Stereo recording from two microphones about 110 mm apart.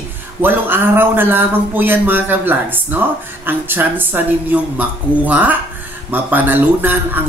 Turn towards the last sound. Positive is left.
turn(degrees=-20)  # may be behind; listen again after turning